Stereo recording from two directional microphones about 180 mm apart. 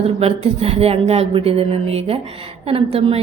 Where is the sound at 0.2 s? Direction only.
35° right (ahead or behind).